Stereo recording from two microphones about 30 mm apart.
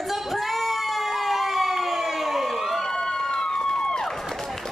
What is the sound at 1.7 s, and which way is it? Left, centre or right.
Emergency vehicle, centre.